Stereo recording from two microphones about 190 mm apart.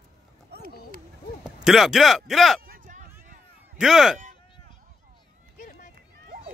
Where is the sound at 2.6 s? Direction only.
45° right (ahead or behind).